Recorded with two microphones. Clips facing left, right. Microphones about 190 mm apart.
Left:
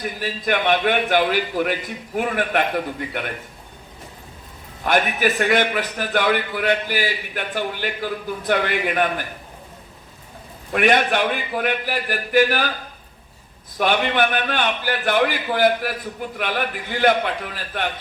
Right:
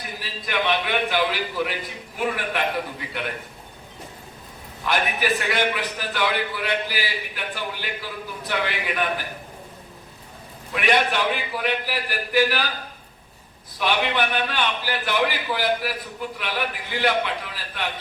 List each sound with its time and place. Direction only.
0.2 s a man's voice: 50° left (ahead or behind)
4.8 s a man's voice: 50° left (ahead or behind)
10.7 s a man's voice: 50° left (ahead or behind)
13.7 s a man's voice: 50° left (ahead or behind)